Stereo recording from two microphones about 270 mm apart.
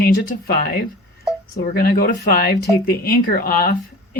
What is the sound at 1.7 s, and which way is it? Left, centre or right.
Speech, left.